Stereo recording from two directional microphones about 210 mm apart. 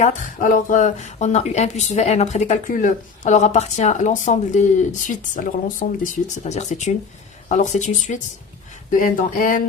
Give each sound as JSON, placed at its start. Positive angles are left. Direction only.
{"t": 0.0, "sound": "speech", "side_deg": 35}